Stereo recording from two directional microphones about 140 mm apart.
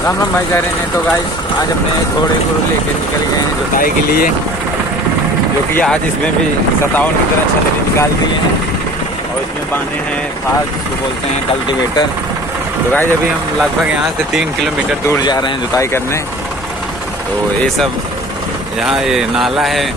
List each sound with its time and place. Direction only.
3.8 s speech: 90° left
5.8 s speech: 10° left (ahead or behind)
15.0 s speech: 30° left (ahead or behind)
18.9 s speech: 5° right (ahead or behind)